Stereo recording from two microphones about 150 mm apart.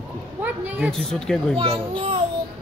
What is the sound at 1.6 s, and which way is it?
Speech, 40° right (ahead or behind).